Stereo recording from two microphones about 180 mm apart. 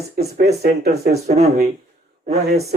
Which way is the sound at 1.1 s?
35° right (ahead or behind).